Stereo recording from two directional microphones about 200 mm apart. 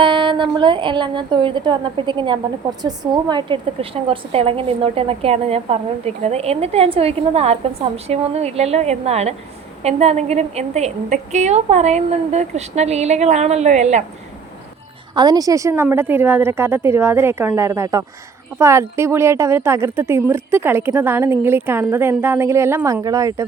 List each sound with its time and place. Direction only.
0.0 s a woman's voice: 25° right (ahead or behind)
15.1 s a woman's voice: 20° right (ahead or behind)